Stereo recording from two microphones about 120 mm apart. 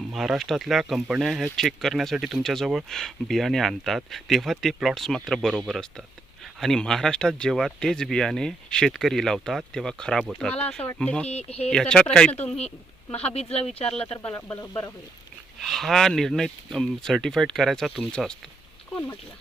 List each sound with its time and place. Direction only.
0.1 s speech: centre (ahead or behind)
11.3 s speech: 60° left (ahead or behind)
11.7 s speech: 5° left (ahead or behind)
13.1 s speech: 60° left (ahead or behind)
14.3 s speech: 20° left (ahead or behind)
15.6 s speech: centre (ahead or behind)